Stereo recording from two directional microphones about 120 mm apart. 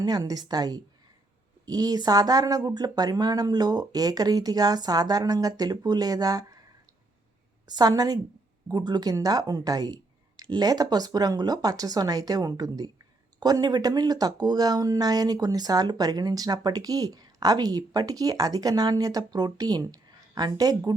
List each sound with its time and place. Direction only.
0.0 s speech: 35° right (ahead or behind)
7.7 s speech: 35° right (ahead or behind)